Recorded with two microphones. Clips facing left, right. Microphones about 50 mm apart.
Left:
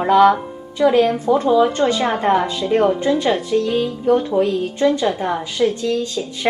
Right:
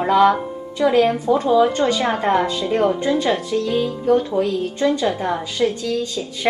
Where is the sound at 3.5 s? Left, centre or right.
Centre.